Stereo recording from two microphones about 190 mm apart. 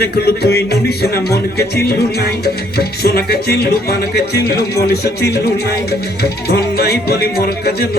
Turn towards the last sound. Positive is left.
turn(degrees=55)  # may be behind; listen again after turning